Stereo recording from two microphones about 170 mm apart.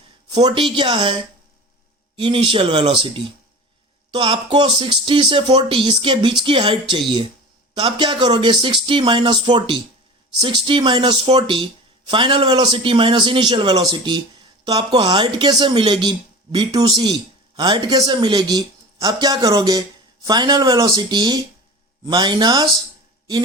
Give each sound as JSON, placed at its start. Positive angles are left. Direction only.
{"t": 0.4, "sound": "speech", "side_deg": -30}